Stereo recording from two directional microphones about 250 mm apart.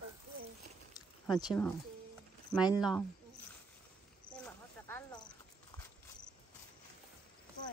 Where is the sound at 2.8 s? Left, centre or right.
Centre.